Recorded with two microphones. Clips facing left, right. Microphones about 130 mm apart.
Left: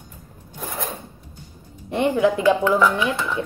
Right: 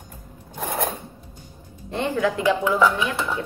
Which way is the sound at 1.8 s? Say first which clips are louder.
Left 4 dB; 15° left (ahead or behind).